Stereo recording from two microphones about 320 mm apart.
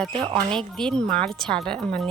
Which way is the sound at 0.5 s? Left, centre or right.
Centre.